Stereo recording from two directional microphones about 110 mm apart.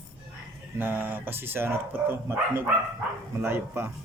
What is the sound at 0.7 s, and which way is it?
Speech, 20° right (ahead or behind).